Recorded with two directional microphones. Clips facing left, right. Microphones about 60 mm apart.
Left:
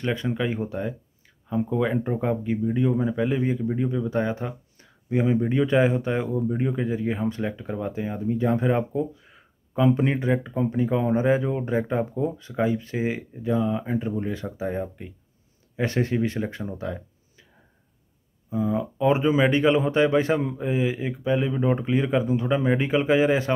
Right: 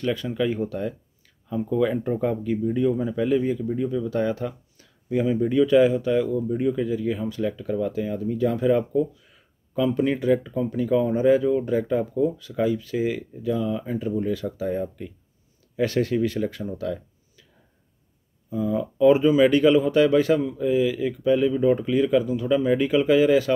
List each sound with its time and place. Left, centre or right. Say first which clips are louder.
0.0 s speech: right 2 dB; left
18.5 s speech: even; left